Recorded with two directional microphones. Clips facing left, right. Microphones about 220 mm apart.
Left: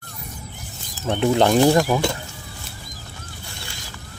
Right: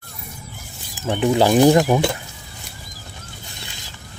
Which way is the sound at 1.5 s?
15° right (ahead or behind).